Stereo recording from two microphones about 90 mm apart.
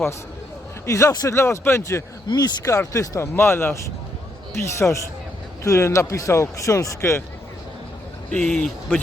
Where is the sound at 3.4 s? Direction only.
25° left (ahead or behind).